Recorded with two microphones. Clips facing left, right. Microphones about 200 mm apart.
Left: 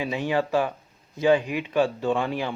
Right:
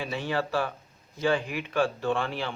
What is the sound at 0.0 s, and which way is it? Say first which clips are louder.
Speech: left 5 dB; 15° left (ahead or behind).